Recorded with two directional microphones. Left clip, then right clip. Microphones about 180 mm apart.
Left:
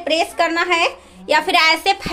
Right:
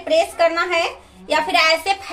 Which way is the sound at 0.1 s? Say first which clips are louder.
Right 2 dB; 85° left.